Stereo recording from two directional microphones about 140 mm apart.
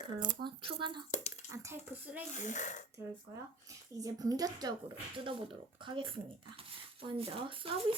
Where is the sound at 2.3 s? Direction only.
60° left (ahead or behind).